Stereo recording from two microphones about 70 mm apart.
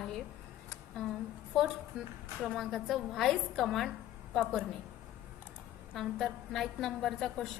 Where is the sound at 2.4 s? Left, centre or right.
Centre.